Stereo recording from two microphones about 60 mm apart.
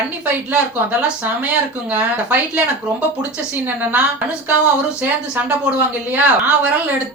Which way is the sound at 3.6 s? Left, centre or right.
Right.